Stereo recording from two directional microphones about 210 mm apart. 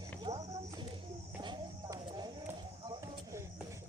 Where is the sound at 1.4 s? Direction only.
20° right (ahead or behind).